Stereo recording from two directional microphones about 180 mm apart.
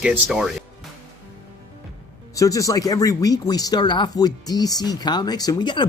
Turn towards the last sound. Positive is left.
turn(degrees=25)  # may be behind; listen again after turning